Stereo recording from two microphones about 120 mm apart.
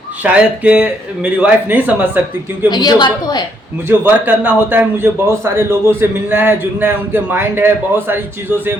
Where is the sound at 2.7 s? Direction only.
35° left (ahead or behind).